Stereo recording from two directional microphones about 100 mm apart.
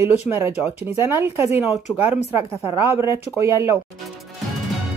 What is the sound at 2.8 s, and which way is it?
Speech, 25° right (ahead or behind).